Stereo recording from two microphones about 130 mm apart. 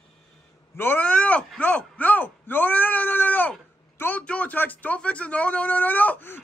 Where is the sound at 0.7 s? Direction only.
15° left (ahead or behind).